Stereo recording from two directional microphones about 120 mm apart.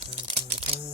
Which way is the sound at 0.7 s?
50° right (ahead or behind).